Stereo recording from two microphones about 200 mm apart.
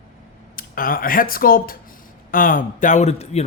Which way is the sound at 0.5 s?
45° left (ahead or behind).